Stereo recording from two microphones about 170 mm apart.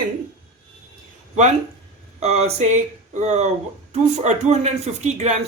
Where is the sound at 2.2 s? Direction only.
40° right (ahead or behind).